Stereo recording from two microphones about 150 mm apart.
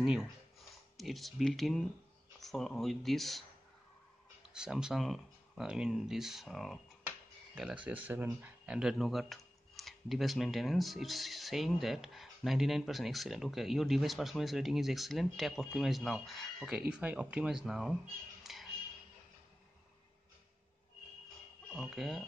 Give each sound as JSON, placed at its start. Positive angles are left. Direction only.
{"t": 0.0, "sound": "speech", "side_deg": 0}
{"t": 4.6, "sound": "speech", "side_deg": -5}
{"t": 18.4, "sound": "music", "side_deg": 0}
{"t": 21.7, "sound": "speech", "side_deg": 0}